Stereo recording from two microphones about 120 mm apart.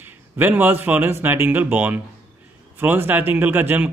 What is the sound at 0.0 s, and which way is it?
A man's voice, 15° right (ahead or behind).